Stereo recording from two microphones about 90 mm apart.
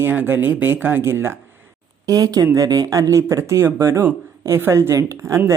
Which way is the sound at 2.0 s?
45° right (ahead or behind).